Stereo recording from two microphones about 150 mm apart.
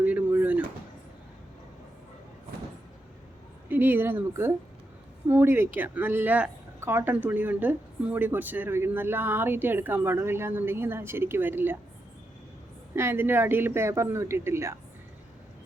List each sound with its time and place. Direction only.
0.0 s a sound: 10° right (ahead or behind)
3.7 s speech: 15° right (ahead or behind)
13.0 s speech: 15° right (ahead or behind)